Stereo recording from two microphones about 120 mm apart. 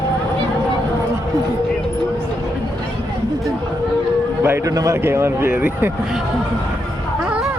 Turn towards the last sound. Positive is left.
turn(degrees=-15)  # may be behind; listen again after turning